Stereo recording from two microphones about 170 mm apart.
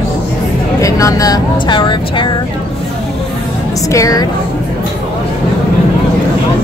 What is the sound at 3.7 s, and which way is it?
Speech, 20° left (ahead or behind).